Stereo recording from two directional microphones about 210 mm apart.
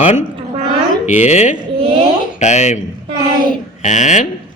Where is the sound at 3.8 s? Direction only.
35° left (ahead or behind).